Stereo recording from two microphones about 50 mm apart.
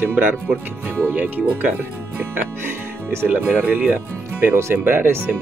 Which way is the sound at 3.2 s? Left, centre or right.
Right.